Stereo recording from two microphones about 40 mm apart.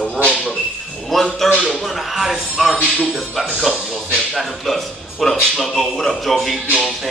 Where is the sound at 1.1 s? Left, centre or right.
Centre.